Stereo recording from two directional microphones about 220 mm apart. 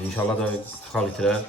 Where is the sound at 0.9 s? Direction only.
Centre (ahead or behind).